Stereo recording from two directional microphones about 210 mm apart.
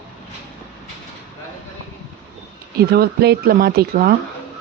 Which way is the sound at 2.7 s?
50° right (ahead or behind).